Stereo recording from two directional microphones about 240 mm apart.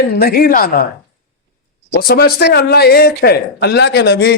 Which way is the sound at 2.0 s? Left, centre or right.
Left.